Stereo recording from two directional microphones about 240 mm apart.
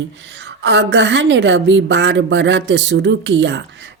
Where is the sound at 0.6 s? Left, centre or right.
Right.